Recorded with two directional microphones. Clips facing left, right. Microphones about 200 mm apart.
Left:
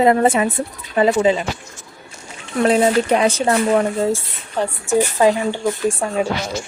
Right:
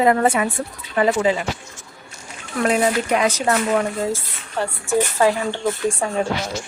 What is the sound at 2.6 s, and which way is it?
A woman's voice, 30° left (ahead or behind).